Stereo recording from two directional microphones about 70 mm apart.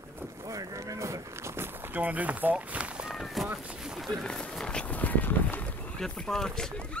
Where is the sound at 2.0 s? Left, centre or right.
Right.